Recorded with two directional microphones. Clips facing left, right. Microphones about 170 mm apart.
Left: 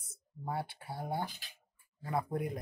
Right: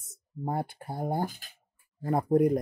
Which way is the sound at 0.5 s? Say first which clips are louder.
Right 6 dB; 45° right (ahead or behind).